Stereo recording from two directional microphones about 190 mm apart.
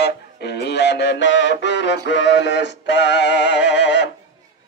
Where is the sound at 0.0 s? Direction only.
60° left (ahead or behind).